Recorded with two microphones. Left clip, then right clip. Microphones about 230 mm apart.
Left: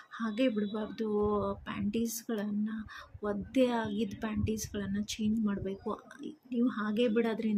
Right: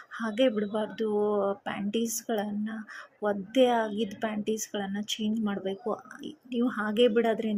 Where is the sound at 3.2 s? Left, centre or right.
Centre.